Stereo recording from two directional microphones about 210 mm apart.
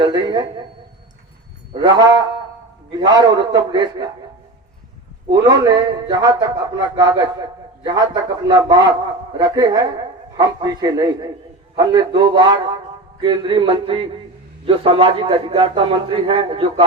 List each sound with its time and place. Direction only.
0.0 s a man's voice: 20° right (ahead or behind)
1.7 s a man's voice: 20° right (ahead or behind)
5.3 s a man's voice: 20° right (ahead or behind)